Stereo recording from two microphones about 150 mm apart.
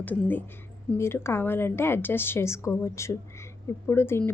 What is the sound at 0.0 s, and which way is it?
A woman's voice, 10° left (ahead or behind).